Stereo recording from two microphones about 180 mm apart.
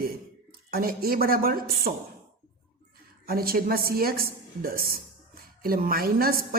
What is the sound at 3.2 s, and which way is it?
A woman's voice, 55° right (ahead or behind).